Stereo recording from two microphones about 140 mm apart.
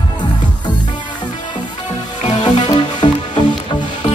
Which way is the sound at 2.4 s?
30° left (ahead or behind).